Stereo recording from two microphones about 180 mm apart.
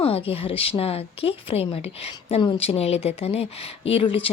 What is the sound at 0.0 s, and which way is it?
A woman's voice, 30° left (ahead or behind).